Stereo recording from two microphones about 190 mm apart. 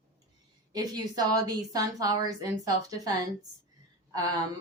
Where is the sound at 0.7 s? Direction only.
20° right (ahead or behind).